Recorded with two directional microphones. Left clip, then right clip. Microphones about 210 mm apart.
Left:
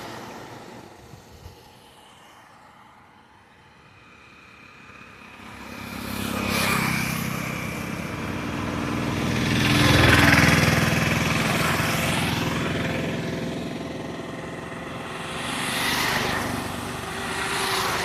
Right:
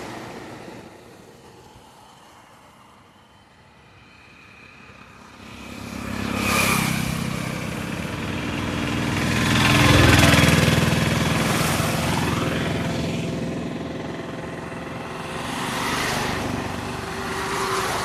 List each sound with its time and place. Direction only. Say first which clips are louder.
5.7 s vehicle: right 1 dB; 20° left (ahead or behind)
6.6 s vehicle: right 1 dB; 40° right (ahead or behind)
6.9 s vehicle: even; 10° right (ahead or behind)
11.9 s vehicle: even; 15° left (ahead or behind)
12.2 s vehicle: right 1 dB; 40° left (ahead or behind); by 16.0 s 20° left (ahead or behind)
16.6 s vehicle: right 2 dB; 5° left (ahead or behind)
17.7 s vehicle: right 1 dB; 35° left (ahead or behind)